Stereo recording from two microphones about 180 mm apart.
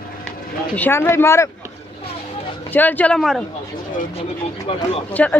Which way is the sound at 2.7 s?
10° left (ahead or behind).